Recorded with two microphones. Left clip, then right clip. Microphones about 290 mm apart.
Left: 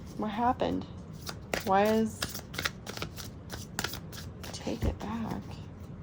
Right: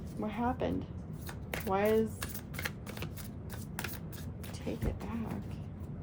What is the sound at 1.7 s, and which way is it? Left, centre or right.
Shuffling cards, left.